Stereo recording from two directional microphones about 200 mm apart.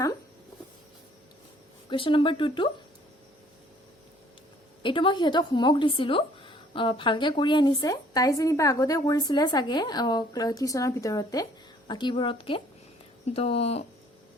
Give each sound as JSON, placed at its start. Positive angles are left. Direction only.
{"t": 1.9, "sound": "speech", "side_deg": 25}
{"t": 4.8, "sound": "speech", "side_deg": 25}